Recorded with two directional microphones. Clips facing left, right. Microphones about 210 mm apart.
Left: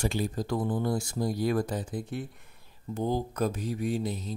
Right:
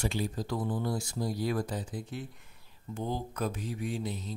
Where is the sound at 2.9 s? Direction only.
40° left (ahead or behind).